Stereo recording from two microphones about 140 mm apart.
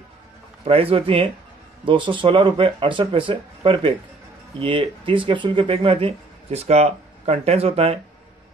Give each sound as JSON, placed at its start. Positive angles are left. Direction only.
{"t": 0.7, "sound": "speech", "side_deg": -45}